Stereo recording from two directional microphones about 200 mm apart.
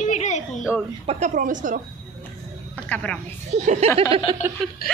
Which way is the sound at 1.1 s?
40° right (ahead or behind).